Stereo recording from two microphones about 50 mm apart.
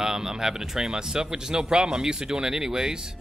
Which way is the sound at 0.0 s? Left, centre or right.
Centre.